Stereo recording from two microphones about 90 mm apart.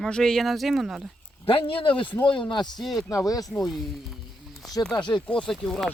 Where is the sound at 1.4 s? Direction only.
85° left; by 2.7 s 60° left (ahead or behind).